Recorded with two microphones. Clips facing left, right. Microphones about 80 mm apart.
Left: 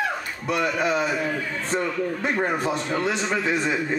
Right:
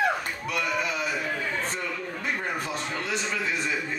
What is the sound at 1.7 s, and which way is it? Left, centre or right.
A man's voice, left.